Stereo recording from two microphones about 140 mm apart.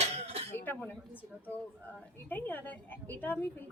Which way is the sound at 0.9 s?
10° left (ahead or behind).